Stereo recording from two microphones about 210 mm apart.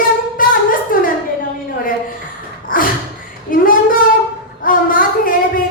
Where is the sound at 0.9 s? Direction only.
40° left (ahead or behind).